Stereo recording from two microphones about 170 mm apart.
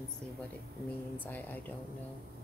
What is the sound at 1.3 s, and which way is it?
Speech, 10° left (ahead or behind).